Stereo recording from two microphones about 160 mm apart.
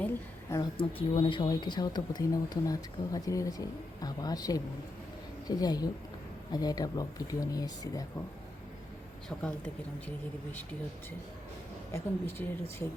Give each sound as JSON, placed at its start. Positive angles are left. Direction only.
{"t": 0.5, "sound": "speech", "side_deg": 30}
{"t": 9.3, "sound": "a woman's voice", "side_deg": 0}
{"t": 11.9, "sound": "speech", "side_deg": 15}